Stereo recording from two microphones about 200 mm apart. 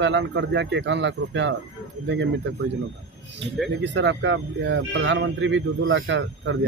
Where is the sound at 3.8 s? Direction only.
65° right (ahead or behind).